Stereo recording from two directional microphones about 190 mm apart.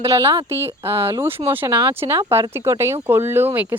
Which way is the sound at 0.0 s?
15° right (ahead or behind).